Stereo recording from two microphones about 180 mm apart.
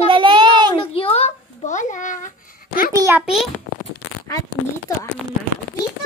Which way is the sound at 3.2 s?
Centre (ahead or behind).